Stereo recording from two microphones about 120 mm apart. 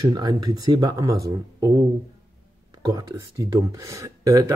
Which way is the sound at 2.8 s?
35° right (ahead or behind).